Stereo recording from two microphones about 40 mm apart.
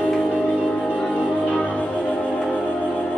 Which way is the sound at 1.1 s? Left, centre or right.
Left.